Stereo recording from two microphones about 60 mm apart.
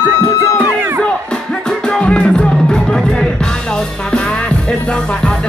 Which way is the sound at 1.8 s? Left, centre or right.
Centre.